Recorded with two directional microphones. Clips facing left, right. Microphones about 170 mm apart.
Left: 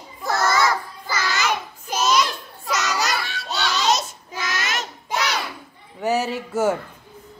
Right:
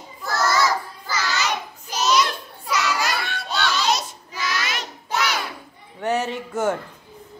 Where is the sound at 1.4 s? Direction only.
50° left (ahead or behind).